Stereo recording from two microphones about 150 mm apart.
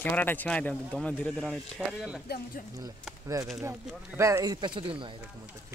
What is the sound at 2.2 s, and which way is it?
Speech, 90° left.